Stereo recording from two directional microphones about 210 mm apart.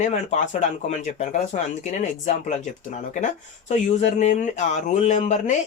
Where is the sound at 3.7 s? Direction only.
35° left (ahead or behind).